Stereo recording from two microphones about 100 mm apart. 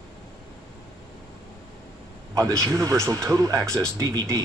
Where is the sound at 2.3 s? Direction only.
35° right (ahead or behind).